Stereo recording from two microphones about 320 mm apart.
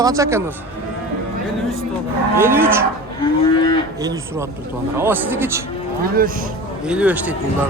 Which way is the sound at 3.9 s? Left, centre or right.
Centre.